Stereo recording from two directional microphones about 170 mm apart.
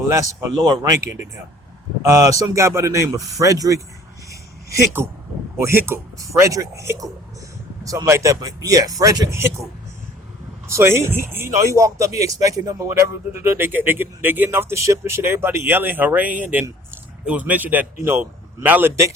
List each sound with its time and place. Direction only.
0.1 s speech: 20° right (ahead or behind)
5.0 s speech: 15° right (ahead or behind)
10.7 s speech: 15° right (ahead or behind)